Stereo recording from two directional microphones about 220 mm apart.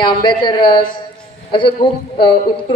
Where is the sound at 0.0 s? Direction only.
20° left (ahead or behind).